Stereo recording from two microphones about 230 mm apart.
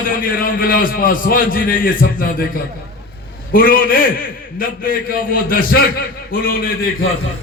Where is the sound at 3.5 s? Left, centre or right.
Left.